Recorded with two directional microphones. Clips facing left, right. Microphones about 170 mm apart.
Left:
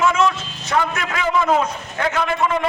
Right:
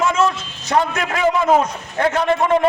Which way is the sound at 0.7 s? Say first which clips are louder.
Right 3 dB; 40° right (ahead or behind).